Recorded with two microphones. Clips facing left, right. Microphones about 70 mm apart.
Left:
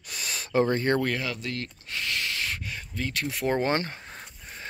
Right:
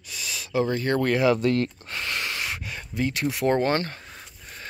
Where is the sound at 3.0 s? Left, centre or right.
Centre.